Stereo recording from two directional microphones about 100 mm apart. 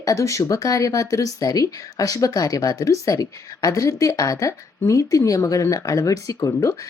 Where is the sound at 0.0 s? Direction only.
30° left (ahead or behind).